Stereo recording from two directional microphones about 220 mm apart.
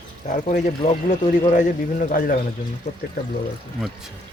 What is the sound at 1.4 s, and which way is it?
Speech, 35° left (ahead or behind).